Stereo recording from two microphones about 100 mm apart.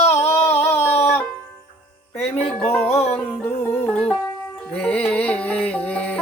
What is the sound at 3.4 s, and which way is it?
Music, 15° left (ahead or behind).